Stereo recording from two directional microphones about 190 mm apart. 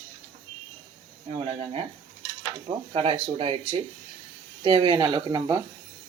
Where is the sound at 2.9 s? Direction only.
30° right (ahead or behind).